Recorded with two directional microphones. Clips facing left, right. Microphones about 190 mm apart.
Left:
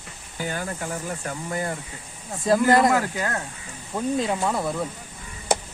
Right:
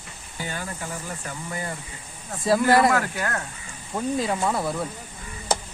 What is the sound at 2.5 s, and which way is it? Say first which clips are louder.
Speech: left 1 dB; 5° right (ahead or behind).